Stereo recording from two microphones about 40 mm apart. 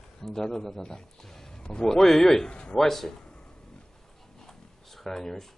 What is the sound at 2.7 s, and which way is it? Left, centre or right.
Speech, centre.